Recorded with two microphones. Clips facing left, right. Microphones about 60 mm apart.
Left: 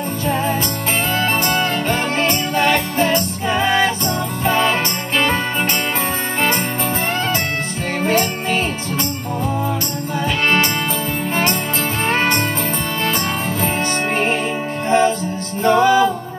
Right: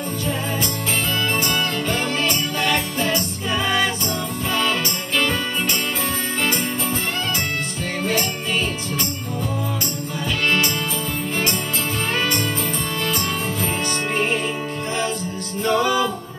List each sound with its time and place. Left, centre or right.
1.5 s music: left
15.6 s music: left